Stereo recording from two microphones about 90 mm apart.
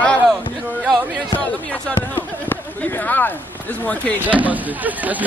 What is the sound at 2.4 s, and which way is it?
Speech, 20° left (ahead or behind).